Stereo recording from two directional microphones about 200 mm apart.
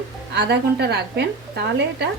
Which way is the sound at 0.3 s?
55° right (ahead or behind).